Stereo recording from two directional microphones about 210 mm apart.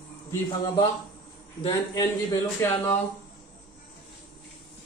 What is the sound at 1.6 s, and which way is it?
A man's voice, 20° left (ahead or behind).